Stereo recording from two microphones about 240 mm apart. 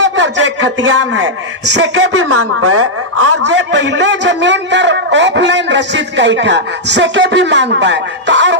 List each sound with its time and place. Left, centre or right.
0.0 s a man's voice: right
2.3 s a woman's voice: right
3.4 s a man's voice: right